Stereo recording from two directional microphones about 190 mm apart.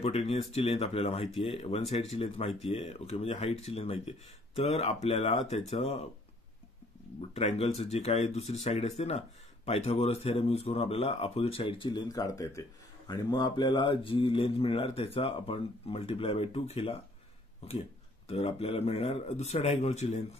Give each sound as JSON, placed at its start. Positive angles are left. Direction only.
{"t": 0.0, "sound": "a man's voice", "side_deg": 30}
{"t": 7.2, "sound": "a man's voice", "side_deg": 30}
{"t": 18.3, "sound": "a man's voice", "side_deg": 35}